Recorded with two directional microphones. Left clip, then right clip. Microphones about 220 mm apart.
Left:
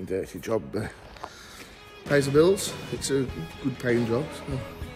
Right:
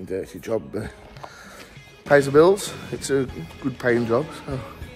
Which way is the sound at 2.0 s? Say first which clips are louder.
Right 6 dB; centre (ahead or behind).